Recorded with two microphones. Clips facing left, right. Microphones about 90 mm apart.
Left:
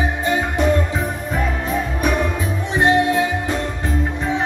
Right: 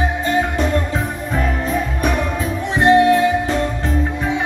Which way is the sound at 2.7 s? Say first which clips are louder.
Right 4 dB; 20° left (ahead or behind).